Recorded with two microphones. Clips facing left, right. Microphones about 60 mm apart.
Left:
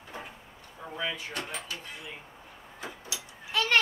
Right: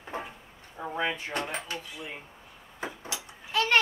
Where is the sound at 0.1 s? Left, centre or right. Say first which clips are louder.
Right 6 dB; right.